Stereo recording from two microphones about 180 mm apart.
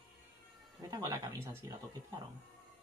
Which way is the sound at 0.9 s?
20° right (ahead or behind).